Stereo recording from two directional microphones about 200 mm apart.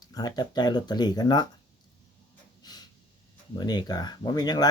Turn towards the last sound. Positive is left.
turn(degrees=20)  # may be behind; listen again after turning